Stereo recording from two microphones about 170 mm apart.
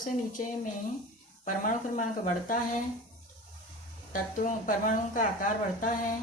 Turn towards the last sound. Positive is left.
turn(degrees=50)  # may be behind; listen again after turning